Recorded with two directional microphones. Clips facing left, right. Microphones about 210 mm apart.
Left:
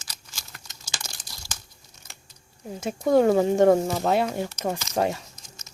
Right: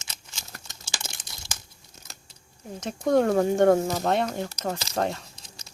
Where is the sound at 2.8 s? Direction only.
5° left (ahead or behind).